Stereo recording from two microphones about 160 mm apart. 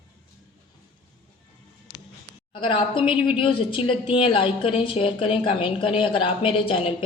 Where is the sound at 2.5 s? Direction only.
30° left (ahead or behind).